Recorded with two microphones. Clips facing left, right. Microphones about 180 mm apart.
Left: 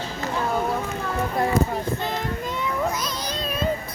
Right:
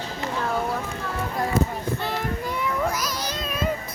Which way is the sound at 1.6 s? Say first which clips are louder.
Right 2 dB; 25° right (ahead or behind).